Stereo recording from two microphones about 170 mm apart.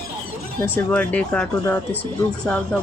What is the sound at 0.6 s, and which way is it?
Speech, 10° left (ahead or behind).